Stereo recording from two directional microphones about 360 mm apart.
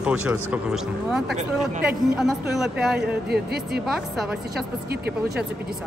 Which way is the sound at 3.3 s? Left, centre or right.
Right.